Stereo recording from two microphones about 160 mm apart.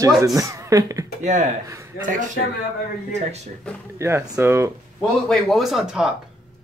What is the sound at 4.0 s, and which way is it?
Speech, 15° right (ahead or behind).